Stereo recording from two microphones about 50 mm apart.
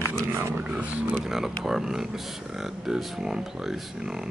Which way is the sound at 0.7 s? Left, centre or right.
Right.